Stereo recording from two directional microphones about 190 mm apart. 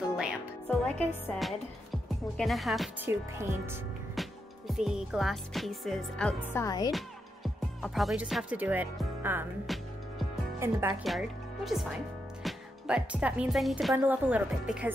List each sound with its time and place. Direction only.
0.7 s speech: 10° left (ahead or behind)
3.1 s speech: 10° right (ahead or behind)
4.1 s music: centre (ahead or behind)
6.5 s speech: 20° left (ahead or behind)
6.9 s speech: centre (ahead or behind)
9.7 s speech: centre (ahead or behind)
10.6 s speech: 15° right (ahead or behind)
11.1 s a woman's voice: centre (ahead or behind)